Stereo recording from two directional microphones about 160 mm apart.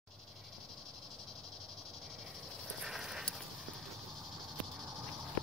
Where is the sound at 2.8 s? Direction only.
5° right (ahead or behind).